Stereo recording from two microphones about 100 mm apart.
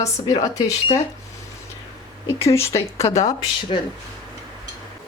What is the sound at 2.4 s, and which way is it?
Speech, 30° left (ahead or behind).